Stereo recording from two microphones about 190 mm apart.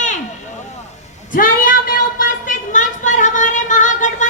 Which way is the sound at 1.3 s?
45° left (ahead or behind).